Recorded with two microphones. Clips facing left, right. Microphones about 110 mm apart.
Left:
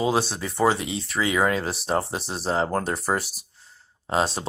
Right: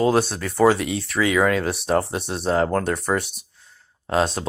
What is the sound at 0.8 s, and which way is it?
Speech, 65° right (ahead or behind).